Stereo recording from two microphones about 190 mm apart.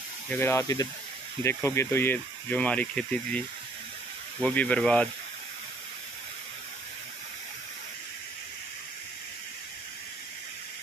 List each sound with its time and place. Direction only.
0.3 s speech: 15° left (ahead or behind)